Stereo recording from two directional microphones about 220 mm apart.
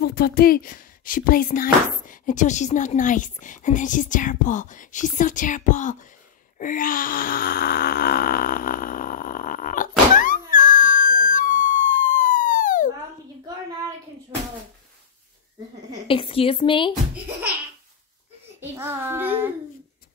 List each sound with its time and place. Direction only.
0.0 s speech: 45° left (ahead or behind)
6.6 s groan: 35° left (ahead or behind)
10.5 s a sound: 35° left (ahead or behind)
16.1 s speech: 25° left (ahead or behind)
18.6 s a child's voice: 10° right (ahead or behind)